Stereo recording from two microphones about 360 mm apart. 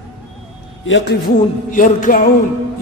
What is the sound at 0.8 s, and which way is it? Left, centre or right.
A man's voice, left.